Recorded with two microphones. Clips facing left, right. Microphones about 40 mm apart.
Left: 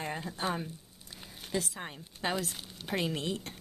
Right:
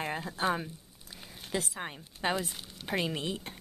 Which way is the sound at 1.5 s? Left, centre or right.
Centre.